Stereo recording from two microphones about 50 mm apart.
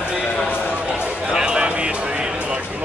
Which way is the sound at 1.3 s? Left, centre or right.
Centre.